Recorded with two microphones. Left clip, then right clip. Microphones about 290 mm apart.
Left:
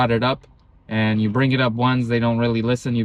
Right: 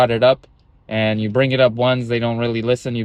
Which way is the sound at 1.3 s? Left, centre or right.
Centre.